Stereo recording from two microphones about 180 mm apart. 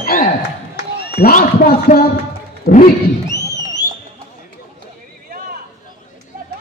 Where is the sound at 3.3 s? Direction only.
15° left (ahead or behind).